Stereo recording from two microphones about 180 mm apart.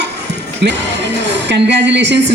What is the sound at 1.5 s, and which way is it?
Speech, 75° right (ahead or behind).